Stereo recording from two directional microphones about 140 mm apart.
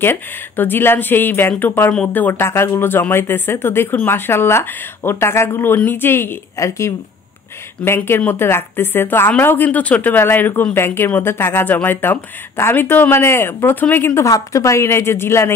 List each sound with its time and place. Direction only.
0.0 s a woman's voice: 15° left (ahead or behind)